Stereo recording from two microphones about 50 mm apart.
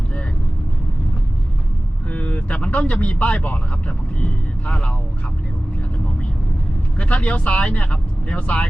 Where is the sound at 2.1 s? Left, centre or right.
Left.